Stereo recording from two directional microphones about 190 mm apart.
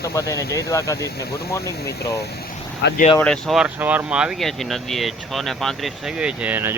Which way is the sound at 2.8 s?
65° left (ahead or behind).